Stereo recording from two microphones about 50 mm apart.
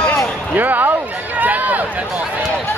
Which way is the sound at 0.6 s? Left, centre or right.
Right.